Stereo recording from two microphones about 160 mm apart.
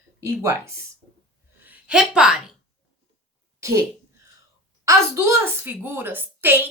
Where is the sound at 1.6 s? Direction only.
10° right (ahead or behind).